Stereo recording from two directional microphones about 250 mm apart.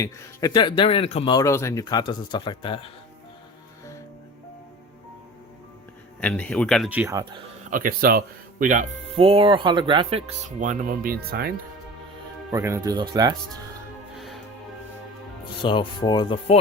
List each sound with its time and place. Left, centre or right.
0.0 s speech: centre
6.1 s speech: centre
7.7 s speech: right
12.5 s speech: centre
15.6 s speech: centre